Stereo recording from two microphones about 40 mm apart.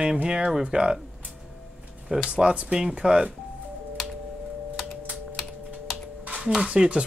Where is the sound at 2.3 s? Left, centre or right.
Right.